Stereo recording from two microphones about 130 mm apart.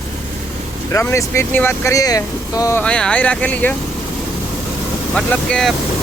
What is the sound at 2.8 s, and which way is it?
Speech, 5° left (ahead or behind).